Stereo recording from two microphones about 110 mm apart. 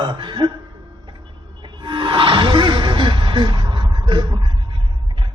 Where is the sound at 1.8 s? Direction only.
45° right (ahead or behind).